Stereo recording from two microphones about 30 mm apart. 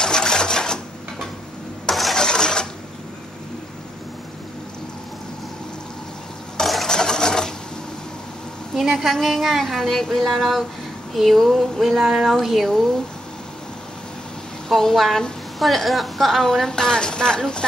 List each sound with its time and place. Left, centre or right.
0.0 s sewing machine: left
2.1 s cash register: left
6.6 s a sound: centre
6.9 s a sound: left
8.7 s a sound: centre
9.2 s a woman's voice: centre
9.8 s speech: centre
10.3 s a woman's voice: centre
11.8 s a woman's voice: centre
14.7 s a woman's voice: centre
16.4 s a woman's voice: centre